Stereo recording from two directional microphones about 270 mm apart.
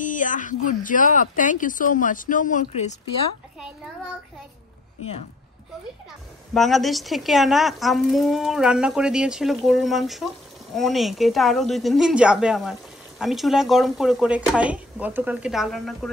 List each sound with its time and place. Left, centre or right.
0.0 s speech: left
6.5 s a woman's voice: centre